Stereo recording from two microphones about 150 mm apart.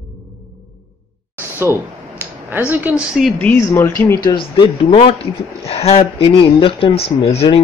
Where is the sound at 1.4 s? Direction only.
15° right (ahead or behind).